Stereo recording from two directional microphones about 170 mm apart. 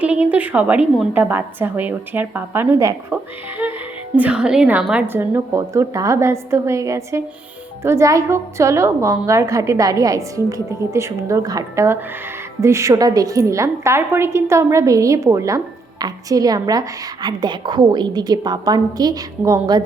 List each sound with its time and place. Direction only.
0.3 s a woman's voice: 10° right (ahead or behind)